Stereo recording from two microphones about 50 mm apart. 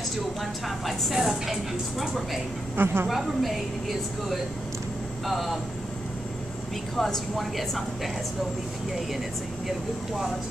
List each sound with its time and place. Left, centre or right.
0.4 s speech: centre
2.7 s a woman's voice: right
3.1 s speech: centre
5.2 s speech: centre
7.0 s speech: centre
9.7 s speech: centre